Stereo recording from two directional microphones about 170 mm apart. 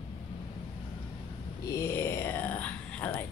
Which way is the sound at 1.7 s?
15° left (ahead or behind).